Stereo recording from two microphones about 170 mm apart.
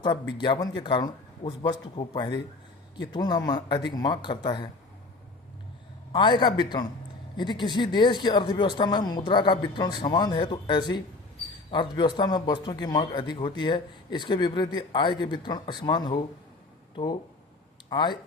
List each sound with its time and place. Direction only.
0.3 s a man's voice: 25° left (ahead or behind)
6.1 s a man's voice: 25° left (ahead or behind)